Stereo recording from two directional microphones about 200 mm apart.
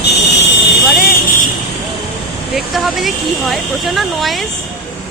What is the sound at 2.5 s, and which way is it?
Speech, centre (ahead or behind).